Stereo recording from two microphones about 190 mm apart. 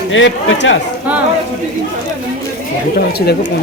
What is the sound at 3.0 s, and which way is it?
Speech, 55° left (ahead or behind).